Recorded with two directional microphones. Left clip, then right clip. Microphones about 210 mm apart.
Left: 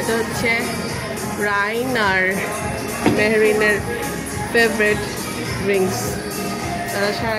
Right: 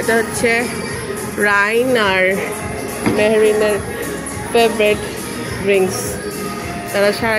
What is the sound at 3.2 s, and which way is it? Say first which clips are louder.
Speech: right 4 dB; 5° right (ahead or behind).